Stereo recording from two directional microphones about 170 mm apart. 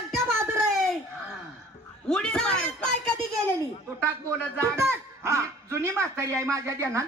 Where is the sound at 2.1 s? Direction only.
5° left (ahead or behind).